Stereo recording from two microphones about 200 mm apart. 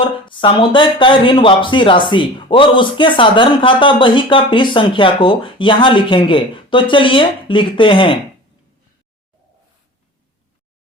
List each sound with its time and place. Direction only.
0.0 s speech: 25° left (ahead or behind)